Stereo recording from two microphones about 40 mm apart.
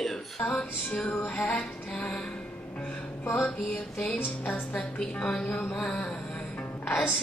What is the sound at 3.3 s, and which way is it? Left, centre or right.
Music, left.